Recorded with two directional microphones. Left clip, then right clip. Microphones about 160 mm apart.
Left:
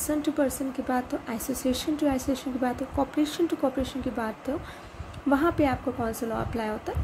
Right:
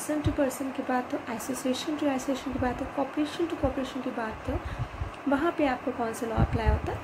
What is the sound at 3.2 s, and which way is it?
Speech, 55° left (ahead or behind).